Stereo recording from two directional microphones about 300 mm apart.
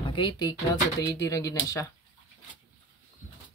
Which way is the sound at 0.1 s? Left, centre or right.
Centre.